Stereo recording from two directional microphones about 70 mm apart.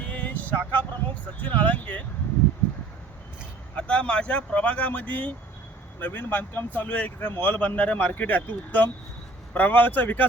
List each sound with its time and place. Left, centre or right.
0.0 s vehicle: centre
1.4 s speech: left
3.8 s speech: centre